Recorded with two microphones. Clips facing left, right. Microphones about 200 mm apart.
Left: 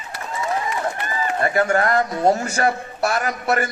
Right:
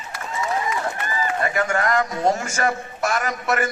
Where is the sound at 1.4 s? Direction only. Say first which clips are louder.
Left 5 dB; 35° left (ahead or behind).